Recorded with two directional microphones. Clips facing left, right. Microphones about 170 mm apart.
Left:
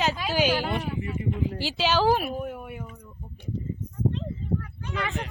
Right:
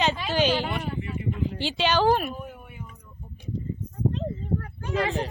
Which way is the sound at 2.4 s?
65° left (ahead or behind).